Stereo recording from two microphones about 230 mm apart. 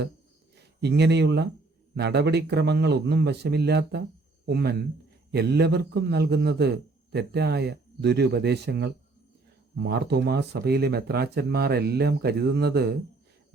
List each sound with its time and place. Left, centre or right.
0.5 s a man's voice: right